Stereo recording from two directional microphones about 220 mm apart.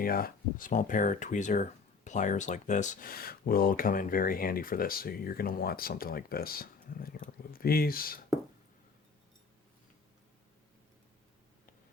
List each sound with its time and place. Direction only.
0.0 s speech: 40° left (ahead or behind)